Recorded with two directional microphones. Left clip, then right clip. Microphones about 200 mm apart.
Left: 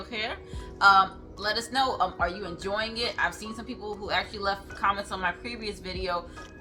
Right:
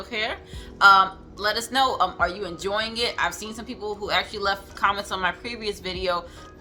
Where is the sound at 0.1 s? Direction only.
25° right (ahead or behind).